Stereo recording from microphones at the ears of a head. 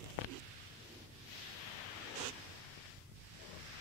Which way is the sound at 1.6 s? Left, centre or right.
Left.